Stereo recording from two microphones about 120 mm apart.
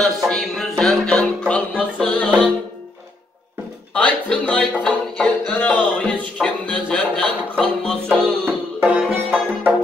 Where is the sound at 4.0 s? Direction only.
10° left (ahead or behind).